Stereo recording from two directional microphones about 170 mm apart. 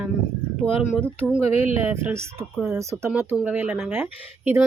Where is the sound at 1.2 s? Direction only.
15° right (ahead or behind).